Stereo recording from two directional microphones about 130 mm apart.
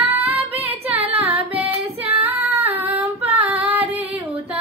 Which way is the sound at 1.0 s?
45° right (ahead or behind).